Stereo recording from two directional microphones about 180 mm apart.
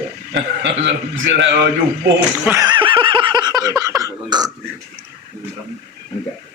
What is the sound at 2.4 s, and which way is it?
Laughter, 15° right (ahead or behind).